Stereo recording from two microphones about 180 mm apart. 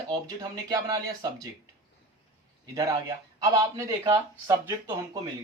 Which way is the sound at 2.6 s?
20° right (ahead or behind).